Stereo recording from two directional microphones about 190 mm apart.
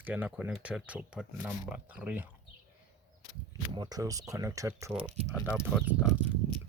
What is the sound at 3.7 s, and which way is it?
Speech, 20° right (ahead or behind).